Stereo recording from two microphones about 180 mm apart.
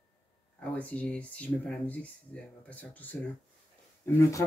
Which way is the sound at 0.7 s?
10° left (ahead or behind).